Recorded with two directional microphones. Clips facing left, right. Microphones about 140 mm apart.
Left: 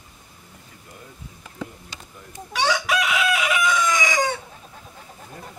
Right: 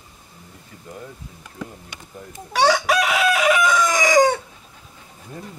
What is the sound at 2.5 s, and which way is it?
Chicken, 40° right (ahead or behind).